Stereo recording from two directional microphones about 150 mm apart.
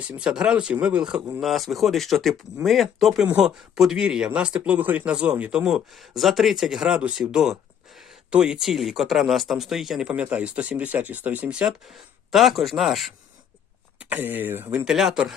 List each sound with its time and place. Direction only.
0.0 s speech: 5° right (ahead or behind)
14.0 s speech: 10° right (ahead or behind)